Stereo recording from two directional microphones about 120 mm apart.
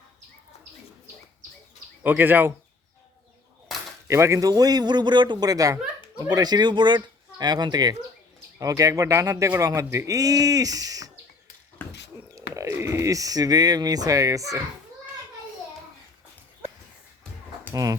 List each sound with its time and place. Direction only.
2.0 s speech: 15° right (ahead or behind)
4.1 s speech: 25° right (ahead or behind)
11.8 s dog: 15° left (ahead or behind)
12.3 s speech: 25° right (ahead or behind)